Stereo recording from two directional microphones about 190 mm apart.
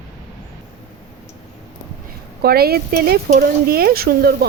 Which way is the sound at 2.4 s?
55° right (ahead or behind).